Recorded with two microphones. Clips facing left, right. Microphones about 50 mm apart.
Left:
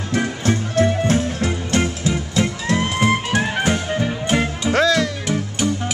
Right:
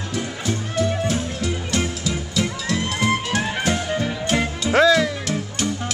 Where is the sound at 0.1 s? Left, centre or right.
Left.